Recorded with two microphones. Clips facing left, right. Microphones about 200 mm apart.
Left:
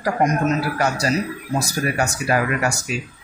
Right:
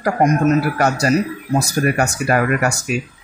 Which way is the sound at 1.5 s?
55° right (ahead or behind).